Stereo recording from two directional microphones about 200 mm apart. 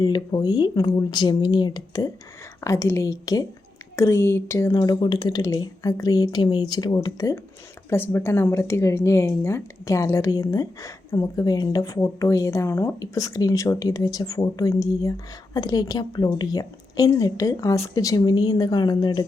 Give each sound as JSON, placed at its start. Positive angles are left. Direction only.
{"t": 0.0, "sound": "a woman's voice", "side_deg": 20}